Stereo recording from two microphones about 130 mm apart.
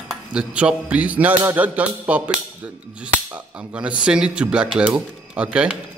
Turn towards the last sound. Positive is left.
turn(degrees=-10)  # may be behind; listen again after turning